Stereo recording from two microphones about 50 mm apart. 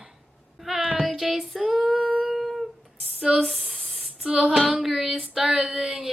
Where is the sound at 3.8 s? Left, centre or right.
Centre.